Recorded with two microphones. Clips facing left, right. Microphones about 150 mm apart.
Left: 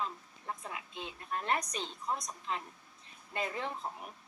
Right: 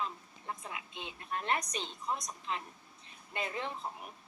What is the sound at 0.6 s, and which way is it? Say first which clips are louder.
A woman's voice: left 1 dB; 20° right (ahead or behind).